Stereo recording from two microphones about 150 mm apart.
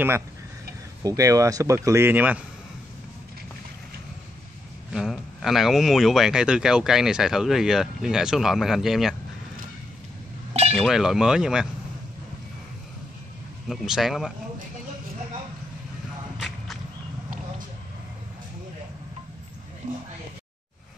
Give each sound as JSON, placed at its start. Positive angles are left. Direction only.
{"t": 1.0, "sound": "speech", "side_deg": -25}
{"t": 4.9, "sound": "speech", "side_deg": 0}
{"t": 10.5, "sound": "chink", "side_deg": -45}
{"t": 10.8, "sound": "speech", "side_deg": 0}
{"t": 13.7, "sound": "speech", "side_deg": 0}
{"t": 16.3, "sound": "whip", "side_deg": 0}
{"t": 19.8, "sound": "a sound", "side_deg": -55}